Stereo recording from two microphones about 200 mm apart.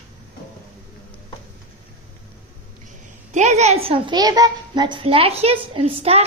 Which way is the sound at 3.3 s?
35° right (ahead or behind).